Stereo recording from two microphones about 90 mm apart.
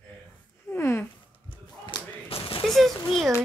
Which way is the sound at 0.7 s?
30° left (ahead or behind).